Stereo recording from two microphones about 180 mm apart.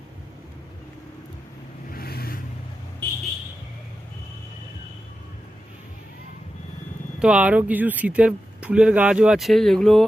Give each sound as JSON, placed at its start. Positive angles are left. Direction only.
{"t": 1.9, "sound": "vehicle", "side_deg": 60}
{"t": 7.2, "sound": "speech", "side_deg": -5}